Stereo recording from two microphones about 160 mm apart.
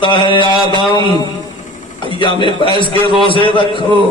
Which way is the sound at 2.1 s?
30° left (ahead or behind).